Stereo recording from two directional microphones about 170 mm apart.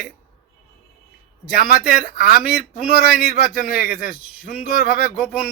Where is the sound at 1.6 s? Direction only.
60° left (ahead or behind).